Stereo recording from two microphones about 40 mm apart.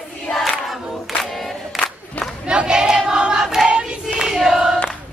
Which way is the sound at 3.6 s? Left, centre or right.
Centre.